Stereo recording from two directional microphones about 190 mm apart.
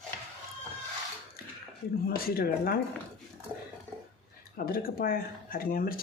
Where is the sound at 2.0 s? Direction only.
50° left (ahead or behind).